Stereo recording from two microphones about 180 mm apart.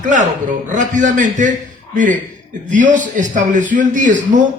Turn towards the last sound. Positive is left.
turn(degrees=-45)  # may be behind; listen again after turning